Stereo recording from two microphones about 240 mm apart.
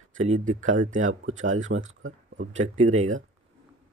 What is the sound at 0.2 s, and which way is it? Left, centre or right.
Speech, right.